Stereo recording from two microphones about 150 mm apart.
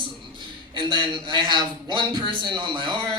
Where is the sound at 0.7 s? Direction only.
30° right (ahead or behind).